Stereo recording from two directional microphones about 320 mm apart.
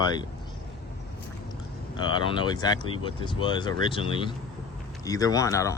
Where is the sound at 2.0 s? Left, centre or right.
Centre.